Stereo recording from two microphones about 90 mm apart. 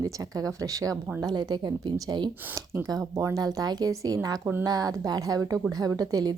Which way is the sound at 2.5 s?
35° right (ahead or behind).